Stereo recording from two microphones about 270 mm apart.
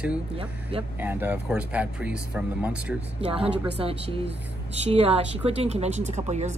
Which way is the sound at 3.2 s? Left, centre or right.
Right.